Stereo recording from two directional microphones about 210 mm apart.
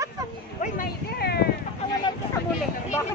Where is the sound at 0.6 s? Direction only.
45° left (ahead or behind).